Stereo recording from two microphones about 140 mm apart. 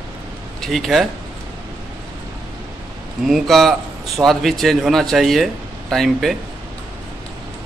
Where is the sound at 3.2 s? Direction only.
Centre (ahead or behind).